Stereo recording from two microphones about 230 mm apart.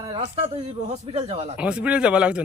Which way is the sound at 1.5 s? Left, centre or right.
Centre.